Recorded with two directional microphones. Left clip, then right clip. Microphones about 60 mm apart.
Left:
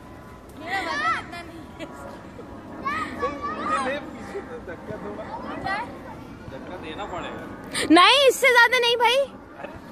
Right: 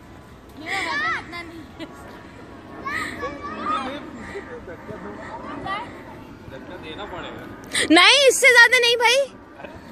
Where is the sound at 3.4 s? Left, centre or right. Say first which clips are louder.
Right 1 dB; centre.